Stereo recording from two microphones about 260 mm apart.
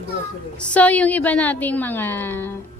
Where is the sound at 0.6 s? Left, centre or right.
Centre.